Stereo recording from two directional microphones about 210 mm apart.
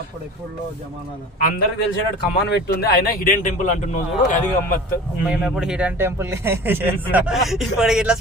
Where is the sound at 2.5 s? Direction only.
50° left (ahead or behind).